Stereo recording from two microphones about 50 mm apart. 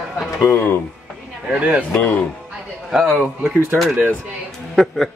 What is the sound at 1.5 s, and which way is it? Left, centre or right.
Speech, right.